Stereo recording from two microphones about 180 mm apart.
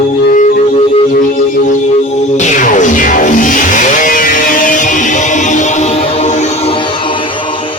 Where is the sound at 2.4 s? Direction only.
45° left (ahead or behind).